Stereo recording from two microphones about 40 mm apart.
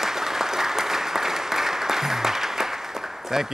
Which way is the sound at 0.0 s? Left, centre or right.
Centre.